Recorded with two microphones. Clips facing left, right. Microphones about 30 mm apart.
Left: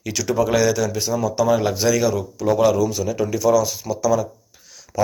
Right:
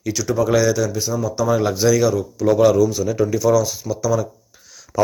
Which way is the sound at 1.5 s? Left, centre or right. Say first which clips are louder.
Right 2 dB; centre.